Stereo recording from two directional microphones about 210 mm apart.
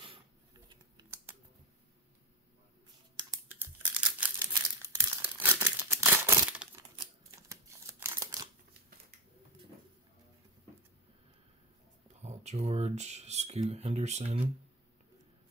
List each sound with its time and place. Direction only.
3.2 s tearing: 15° right (ahead or behind)
4.5 s crumpling: 15° right (ahead or behind)
12.1 s speech: 30° right (ahead or behind)